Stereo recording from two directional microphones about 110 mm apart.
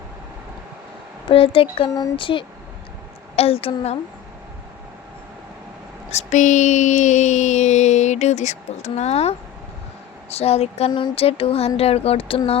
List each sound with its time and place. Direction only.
1.3 s music: 55° left (ahead or behind)
2.1 s speech: 50° left (ahead or behind)
3.3 s speech: 65° left (ahead or behind)
6.1 s a sound: 85° left
10.2 s speech: 65° left (ahead or behind)
10.9 s music: 55° left (ahead or behind)